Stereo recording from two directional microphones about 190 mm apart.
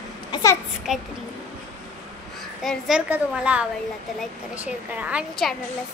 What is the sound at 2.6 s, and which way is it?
A woman's voice, centre (ahead or behind).